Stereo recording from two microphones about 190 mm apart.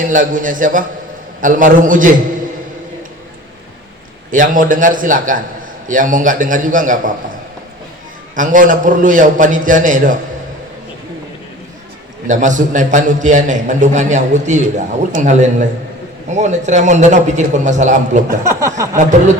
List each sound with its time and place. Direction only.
0.0 s a man's voice: 45° right (ahead or behind)
4.3 s a man's voice: 45° right (ahead or behind)
8.4 s a man's voice: 45° right (ahead or behind)
12.3 s a man's voice: 40° right (ahead or behind)
18.3 s speech: 15° right (ahead or behind)